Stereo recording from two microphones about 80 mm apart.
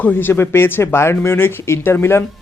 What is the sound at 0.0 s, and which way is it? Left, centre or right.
Speech, left.